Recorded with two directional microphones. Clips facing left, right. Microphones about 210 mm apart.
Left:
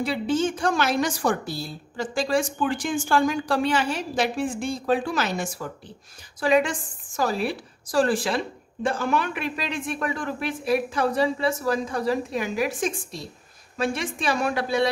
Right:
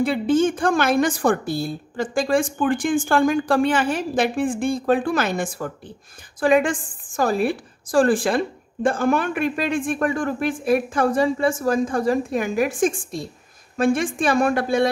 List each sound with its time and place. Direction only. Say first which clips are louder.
0.0 s a woman's voice: right 5 dB; 55° right (ahead or behind)